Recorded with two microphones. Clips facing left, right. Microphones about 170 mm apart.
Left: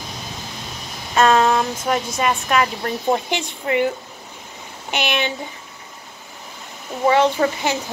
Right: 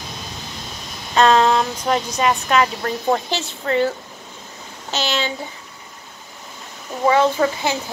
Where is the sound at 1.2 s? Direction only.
10° left (ahead or behind).